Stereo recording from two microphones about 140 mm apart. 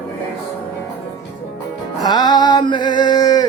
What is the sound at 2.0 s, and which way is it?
A man's voice, 30° left (ahead or behind).